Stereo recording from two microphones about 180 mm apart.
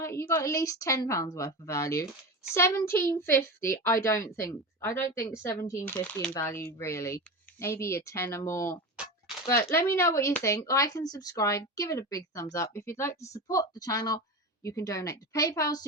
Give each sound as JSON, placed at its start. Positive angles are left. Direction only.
{"t": 0.0, "sound": "a woman's voice", "side_deg": 15}